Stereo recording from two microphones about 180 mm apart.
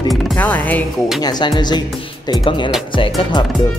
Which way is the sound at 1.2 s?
20° left (ahead or behind).